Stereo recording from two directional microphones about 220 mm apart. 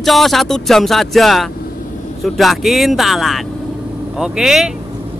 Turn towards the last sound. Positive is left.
turn(degrees=0)  # may be behind; listen again after turning